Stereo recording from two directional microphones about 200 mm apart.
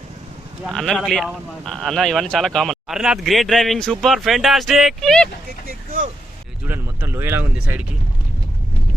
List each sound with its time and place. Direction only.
0.6 s speech: centre (ahead or behind)
5.6 s vehicle: 45° right (ahead or behind)
6.7 s speech: 10° right (ahead or behind)